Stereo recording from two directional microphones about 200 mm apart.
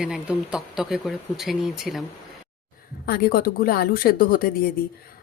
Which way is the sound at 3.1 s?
50° left (ahead or behind).